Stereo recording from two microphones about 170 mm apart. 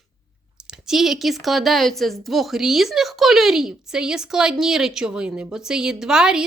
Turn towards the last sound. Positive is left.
turn(degrees=-5)  # may be behind; listen again after turning